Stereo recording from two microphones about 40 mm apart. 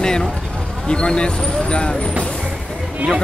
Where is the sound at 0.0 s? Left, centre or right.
Centre.